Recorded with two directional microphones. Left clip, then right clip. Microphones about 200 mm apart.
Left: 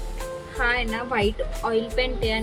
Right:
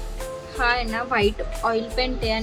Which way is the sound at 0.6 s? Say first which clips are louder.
Right 2 dB; 5° right (ahead or behind).